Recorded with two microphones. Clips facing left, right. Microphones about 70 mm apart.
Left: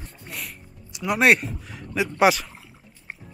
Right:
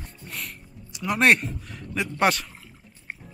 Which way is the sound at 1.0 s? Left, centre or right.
Centre.